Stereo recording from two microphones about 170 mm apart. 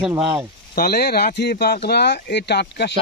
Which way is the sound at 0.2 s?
30° right (ahead or behind).